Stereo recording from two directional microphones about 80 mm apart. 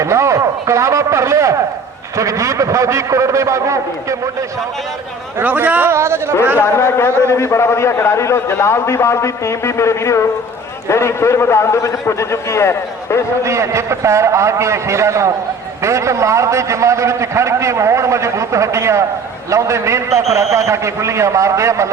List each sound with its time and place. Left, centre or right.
0.0 s a man's voice: right
5.4 s a man's voice: right
5.9 s a man's voice: right
6.6 s a man's voice: left
13.4 s a man's voice: right